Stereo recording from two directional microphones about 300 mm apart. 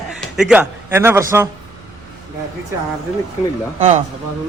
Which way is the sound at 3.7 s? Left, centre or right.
Right.